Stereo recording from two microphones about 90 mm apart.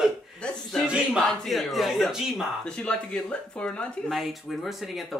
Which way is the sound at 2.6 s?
10° left (ahead or behind).